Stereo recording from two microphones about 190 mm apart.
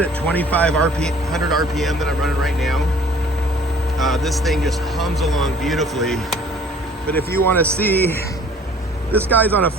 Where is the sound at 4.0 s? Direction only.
Centre (ahead or behind).